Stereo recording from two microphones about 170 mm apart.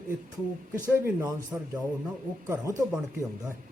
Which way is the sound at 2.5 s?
15° right (ahead or behind).